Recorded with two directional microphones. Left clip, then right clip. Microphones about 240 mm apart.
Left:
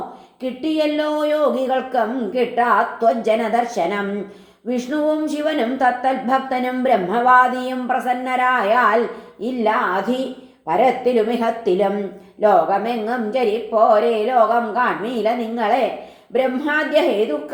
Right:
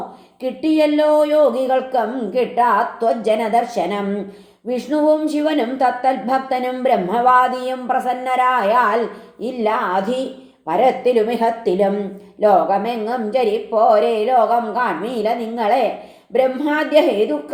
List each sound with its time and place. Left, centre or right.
0.6 s a woman's voice: right